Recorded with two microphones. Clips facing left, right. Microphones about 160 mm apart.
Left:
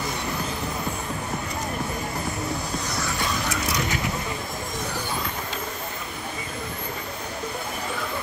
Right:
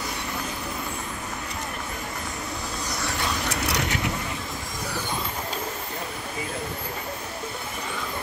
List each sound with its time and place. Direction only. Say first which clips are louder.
3.6 s vehicle: even; 70° right (ahead or behind)